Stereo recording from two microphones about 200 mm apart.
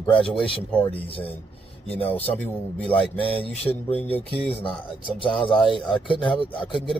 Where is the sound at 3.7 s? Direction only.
10° left (ahead or behind).